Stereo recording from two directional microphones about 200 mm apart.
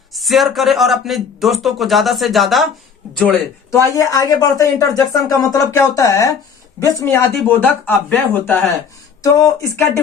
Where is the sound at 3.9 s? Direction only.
15° left (ahead or behind).